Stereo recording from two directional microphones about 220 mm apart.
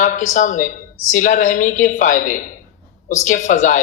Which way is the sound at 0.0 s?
35° left (ahead or behind).